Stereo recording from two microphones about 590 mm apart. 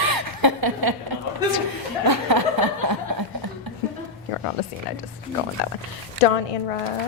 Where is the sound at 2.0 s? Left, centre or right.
Right.